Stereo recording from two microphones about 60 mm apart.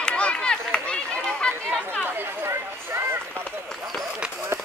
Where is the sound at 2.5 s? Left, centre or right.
Right.